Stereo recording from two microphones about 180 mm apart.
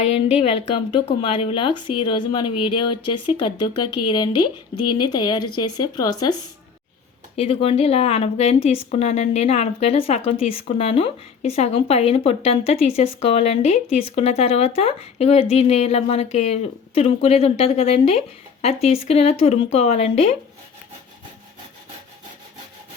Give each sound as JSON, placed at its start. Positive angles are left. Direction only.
{"t": 0.0, "sound": "a woman's voice", "side_deg": 35}
{"t": 7.3, "sound": "a woman's voice", "side_deg": 30}